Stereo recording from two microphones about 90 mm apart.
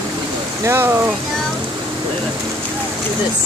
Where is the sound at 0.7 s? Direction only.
30° right (ahead or behind).